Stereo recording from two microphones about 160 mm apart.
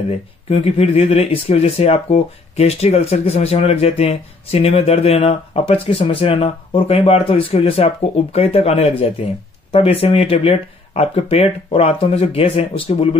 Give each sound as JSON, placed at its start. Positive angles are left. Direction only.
{"t": 0.5, "sound": "speech", "side_deg": 40}